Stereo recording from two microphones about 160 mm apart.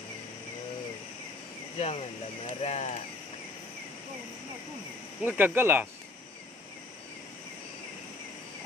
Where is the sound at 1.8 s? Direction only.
40° left (ahead or behind).